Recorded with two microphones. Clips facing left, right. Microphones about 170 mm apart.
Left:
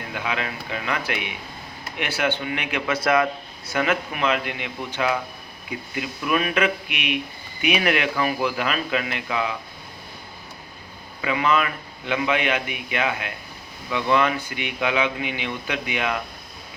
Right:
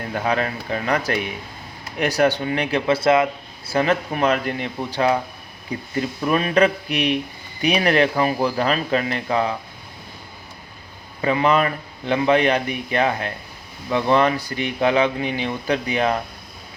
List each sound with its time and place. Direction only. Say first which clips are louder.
0.1 s speech: right 6 dB; 40° right (ahead or behind)
11.2 s speech: right 4 dB; 40° right (ahead or behind)